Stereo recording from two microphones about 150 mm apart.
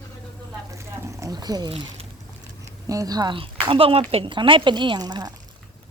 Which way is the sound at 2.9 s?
25° right (ahead or behind).